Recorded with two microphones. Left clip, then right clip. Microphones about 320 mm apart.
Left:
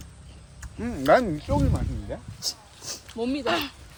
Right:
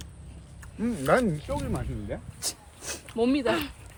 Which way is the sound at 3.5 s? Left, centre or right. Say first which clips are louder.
Left 1 dB; centre.